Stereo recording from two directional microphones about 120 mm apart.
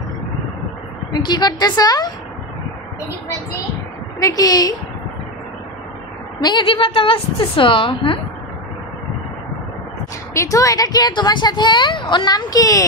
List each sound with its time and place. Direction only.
1.1 s speech: 35° left (ahead or behind)
4.2 s speech: 30° left (ahead or behind)
6.4 s a woman's voice: 40° left (ahead or behind)
10.3 s speech: 25° left (ahead or behind)